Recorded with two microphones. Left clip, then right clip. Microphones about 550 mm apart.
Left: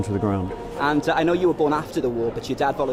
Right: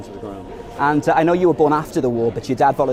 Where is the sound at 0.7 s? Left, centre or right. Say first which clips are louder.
Right 5 dB; right.